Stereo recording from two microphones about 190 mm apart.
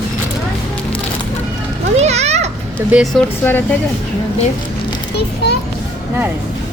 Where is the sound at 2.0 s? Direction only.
35° right (ahead or behind).